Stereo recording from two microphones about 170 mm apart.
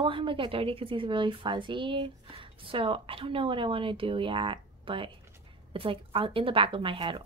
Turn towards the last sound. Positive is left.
turn(degrees=-30)  # may be behind; listen again after turning